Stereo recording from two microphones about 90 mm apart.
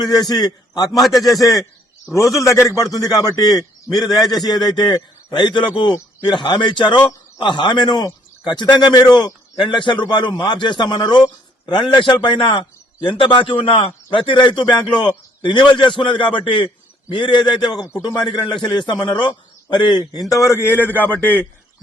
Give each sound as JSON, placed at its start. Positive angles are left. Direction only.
{"t": 0.3, "sound": "a man's voice", "side_deg": 50}
{"t": 0.9, "sound": "a man's voice", "side_deg": 0}
{"t": 1.4, "sound": "a man's voice", "side_deg": 40}
{"t": 9.6, "sound": "a man's voice", "side_deg": 65}
{"t": 20.3, "sound": "a man's voice", "side_deg": 30}